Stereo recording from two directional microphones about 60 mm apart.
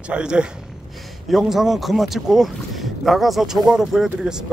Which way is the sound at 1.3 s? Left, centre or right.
Centre.